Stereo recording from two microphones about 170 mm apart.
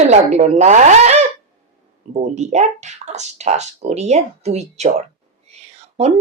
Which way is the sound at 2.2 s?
45° right (ahead or behind).